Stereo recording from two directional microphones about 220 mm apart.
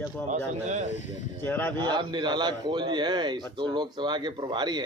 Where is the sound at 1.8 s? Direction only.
20° right (ahead or behind).